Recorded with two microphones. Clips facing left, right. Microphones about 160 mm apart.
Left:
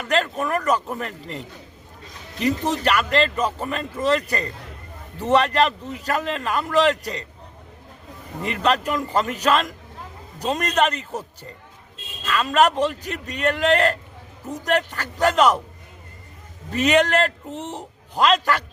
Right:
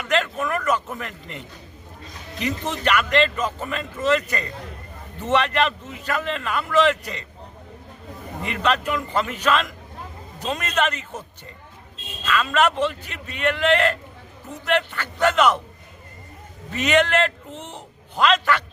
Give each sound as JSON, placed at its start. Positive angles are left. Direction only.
{"t": 0.0, "sound": "a man's voice", "side_deg": 40}
{"t": 2.4, "sound": "a man's voice", "side_deg": 35}
{"t": 8.4, "sound": "a man's voice", "side_deg": 40}
{"t": 16.7, "sound": "a man's voice", "side_deg": 35}